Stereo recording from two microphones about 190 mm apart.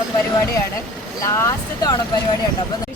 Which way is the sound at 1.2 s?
15° left (ahead or behind).